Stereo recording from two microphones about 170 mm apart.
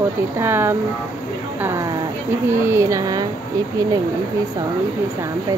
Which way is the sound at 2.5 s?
15° right (ahead or behind).